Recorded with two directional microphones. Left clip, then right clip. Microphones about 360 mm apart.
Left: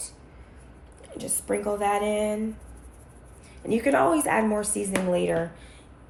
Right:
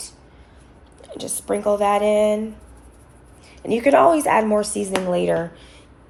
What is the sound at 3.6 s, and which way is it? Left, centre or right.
A woman's voice, right.